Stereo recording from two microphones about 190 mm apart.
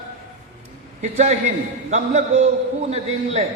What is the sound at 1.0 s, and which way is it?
A man's voice, 40° right (ahead or behind).